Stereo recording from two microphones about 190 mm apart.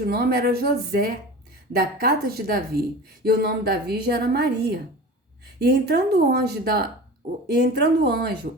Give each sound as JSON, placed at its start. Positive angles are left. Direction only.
{"t": 0.0, "sound": "a woman's voice", "side_deg": -55}